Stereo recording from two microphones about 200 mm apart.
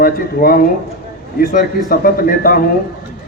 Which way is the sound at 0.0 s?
45° left (ahead or behind).